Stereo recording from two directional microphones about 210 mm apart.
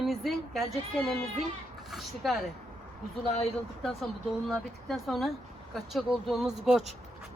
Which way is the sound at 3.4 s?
Centre (ahead or behind).